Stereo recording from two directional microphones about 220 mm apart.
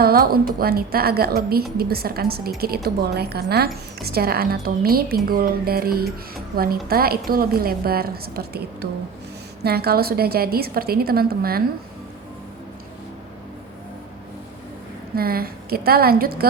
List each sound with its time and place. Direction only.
0.0 s speech: 45° right (ahead or behind)
15.1 s speech: 45° right (ahead or behind)